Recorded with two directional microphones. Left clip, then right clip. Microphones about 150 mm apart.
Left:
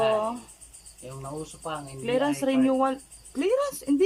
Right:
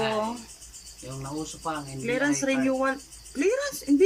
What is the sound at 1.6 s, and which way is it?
Speech, 20° left (ahead or behind).